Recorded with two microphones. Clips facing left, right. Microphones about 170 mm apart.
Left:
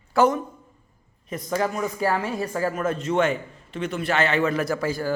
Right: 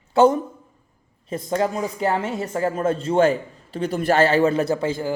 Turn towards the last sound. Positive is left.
turn(degrees=-25)  # may be behind; listen again after turning